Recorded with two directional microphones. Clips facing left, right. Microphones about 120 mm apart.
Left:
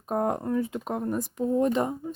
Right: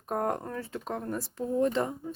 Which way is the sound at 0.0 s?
15° left (ahead or behind).